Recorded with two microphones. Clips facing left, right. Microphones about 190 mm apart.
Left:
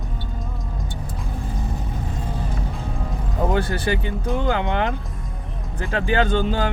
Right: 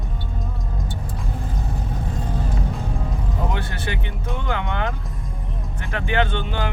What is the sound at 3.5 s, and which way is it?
Speech, 35° left (ahead or behind).